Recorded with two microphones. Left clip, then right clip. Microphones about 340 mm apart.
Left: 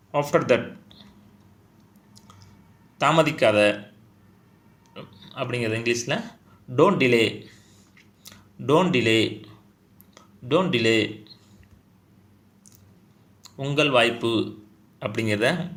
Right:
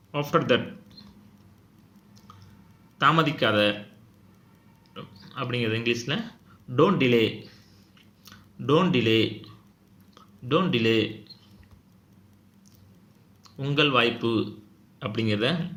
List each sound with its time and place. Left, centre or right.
0.1 s speech: centre
3.0 s speech: centre
4.9 s a sound: centre
5.6 s speech: centre
13.4 s speech: centre